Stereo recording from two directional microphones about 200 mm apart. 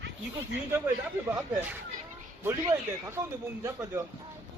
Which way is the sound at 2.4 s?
15° right (ahead or behind).